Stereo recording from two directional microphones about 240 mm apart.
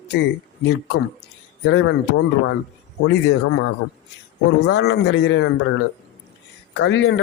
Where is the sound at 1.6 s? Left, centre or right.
Left.